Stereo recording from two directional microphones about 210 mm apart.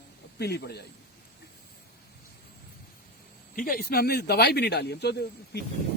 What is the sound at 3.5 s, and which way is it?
Speech, 45° left (ahead or behind).